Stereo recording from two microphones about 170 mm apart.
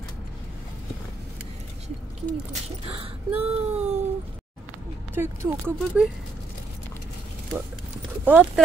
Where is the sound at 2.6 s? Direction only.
35° right (ahead or behind).